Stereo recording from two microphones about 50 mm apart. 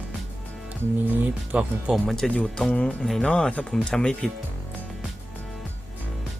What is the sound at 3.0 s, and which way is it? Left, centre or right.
Speech, centre.